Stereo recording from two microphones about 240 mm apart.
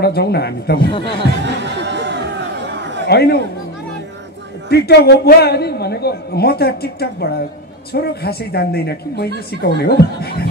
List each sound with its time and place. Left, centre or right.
0.0 s speech: left
0.9 s speech: left
1.4 s chatter: right
3.1 s speech: left
4.6 s a woman's voice: left